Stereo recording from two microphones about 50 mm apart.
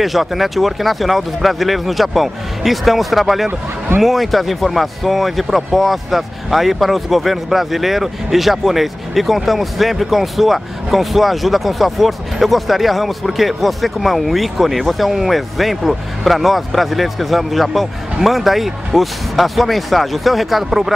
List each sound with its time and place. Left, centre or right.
0.0 s speech: centre